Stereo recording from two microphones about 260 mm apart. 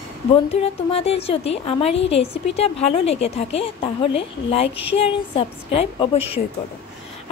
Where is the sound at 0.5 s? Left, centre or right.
Left.